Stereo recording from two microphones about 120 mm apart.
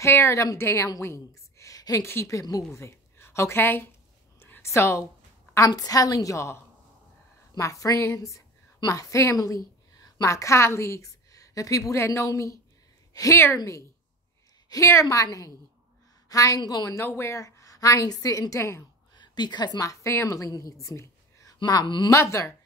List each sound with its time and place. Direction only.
0.0 s a woman's voice: 25° left (ahead or behind)
4.4 s a sound: 20° left (ahead or behind)
5.7 s a woman's voice: 30° left (ahead or behind)
19.1 s a woman's voice: 40° left (ahead or behind)
21.5 s speech: 35° left (ahead or behind)
22.1 s a woman's voice: 25° left (ahead or behind)